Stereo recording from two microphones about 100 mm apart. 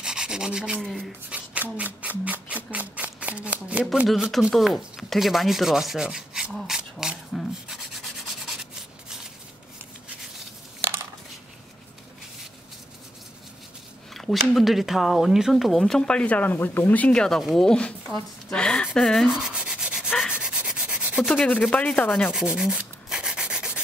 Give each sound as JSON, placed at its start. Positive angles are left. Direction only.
{"t": 0.0, "sound": "rub", "side_deg": -10}
{"t": 0.8, "sound": "speech", "side_deg": 0}
{"t": 1.3, "sound": "speech", "side_deg": -15}
{"t": 4.1, "sound": "rub", "side_deg": 0}
{"t": 10.8, "sound": "a sound", "side_deg": -20}
{"t": 14.1, "sound": "speech", "side_deg": 0}
{"t": 19.2, "sound": "rub", "side_deg": -5}
{"t": 20.3, "sound": "sanding", "side_deg": -10}
{"t": 21.4, "sound": "sanding", "side_deg": 15}
{"t": 22.3, "sound": "sanding", "side_deg": -5}